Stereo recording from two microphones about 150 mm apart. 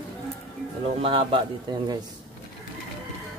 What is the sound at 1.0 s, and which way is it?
Speech, 35° right (ahead or behind).